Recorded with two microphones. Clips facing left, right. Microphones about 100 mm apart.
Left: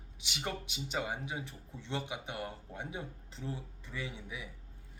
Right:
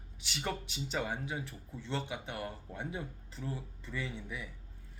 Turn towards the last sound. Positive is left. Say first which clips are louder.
# right 2 dB
turn(degrees=15)  # may be behind; listen again after turning